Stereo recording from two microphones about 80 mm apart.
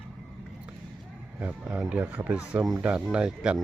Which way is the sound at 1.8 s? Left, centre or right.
Centre.